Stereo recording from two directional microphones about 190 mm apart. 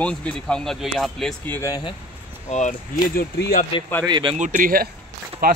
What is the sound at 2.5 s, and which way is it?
Speech, 40° left (ahead or behind).